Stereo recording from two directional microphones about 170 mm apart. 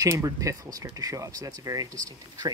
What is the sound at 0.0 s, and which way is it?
Speech, 20° right (ahead or behind).